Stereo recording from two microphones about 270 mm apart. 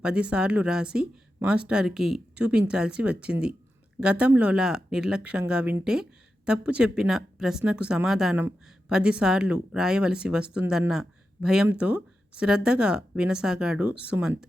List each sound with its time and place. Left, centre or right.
0.0 s speech: centre